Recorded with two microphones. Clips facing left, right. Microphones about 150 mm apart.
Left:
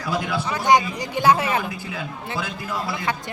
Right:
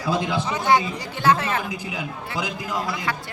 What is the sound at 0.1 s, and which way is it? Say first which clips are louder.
Speech: right 1 dB; 20° right (ahead or behind).